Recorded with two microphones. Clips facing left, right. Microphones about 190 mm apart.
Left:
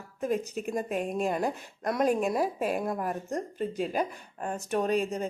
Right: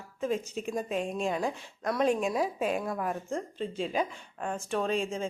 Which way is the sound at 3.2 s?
40° left (ahead or behind).